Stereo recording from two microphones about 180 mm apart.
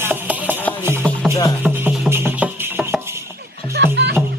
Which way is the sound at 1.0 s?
5° left (ahead or behind).